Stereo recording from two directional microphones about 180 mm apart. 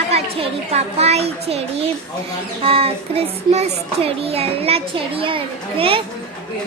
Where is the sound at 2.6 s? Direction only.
30° right (ahead or behind).